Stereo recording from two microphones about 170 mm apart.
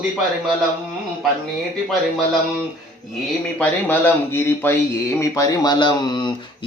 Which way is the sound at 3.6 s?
10° left (ahead or behind).